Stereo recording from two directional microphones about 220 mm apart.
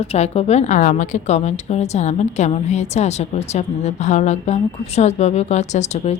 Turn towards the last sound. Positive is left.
turn(degrees=30)  # may be behind; listen again after turning